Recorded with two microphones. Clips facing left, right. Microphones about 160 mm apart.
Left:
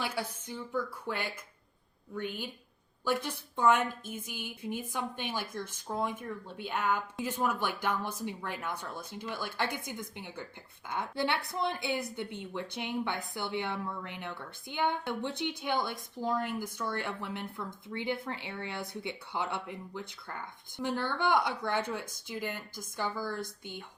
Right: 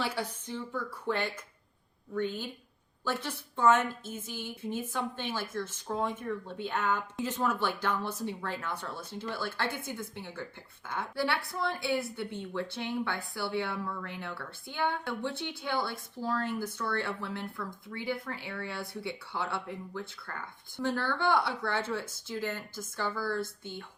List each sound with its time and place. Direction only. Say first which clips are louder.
0.0 s a woman's voice: right 2 dB; 10° left (ahead or behind)